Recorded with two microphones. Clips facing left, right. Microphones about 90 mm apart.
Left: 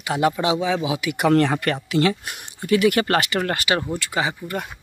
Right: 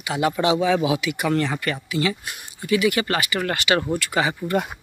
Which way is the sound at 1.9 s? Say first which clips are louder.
Left 5 dB; 55° left (ahead or behind).